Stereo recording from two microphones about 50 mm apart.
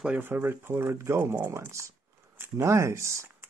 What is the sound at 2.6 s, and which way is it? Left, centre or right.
Speech, right.